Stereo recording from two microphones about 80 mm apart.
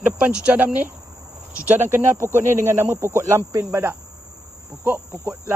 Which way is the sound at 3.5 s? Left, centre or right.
Right.